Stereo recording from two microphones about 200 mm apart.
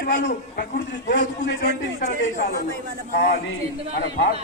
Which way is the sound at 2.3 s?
45° left (ahead or behind).